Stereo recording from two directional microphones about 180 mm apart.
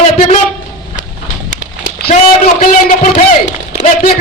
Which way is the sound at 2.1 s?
40° left (ahead or behind).